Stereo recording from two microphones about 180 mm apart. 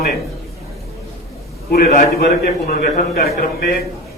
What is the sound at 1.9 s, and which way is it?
A man's voice, 50° left (ahead or behind).